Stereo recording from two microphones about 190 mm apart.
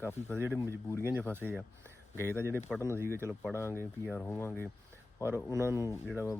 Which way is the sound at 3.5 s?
15° left (ahead or behind).